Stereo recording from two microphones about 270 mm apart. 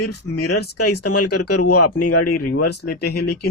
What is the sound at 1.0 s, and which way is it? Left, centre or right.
Speech, left.